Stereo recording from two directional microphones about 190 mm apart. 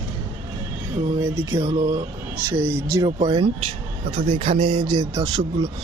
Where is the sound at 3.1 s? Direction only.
30° right (ahead or behind).